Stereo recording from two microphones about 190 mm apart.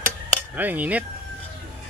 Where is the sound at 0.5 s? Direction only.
10° right (ahead or behind).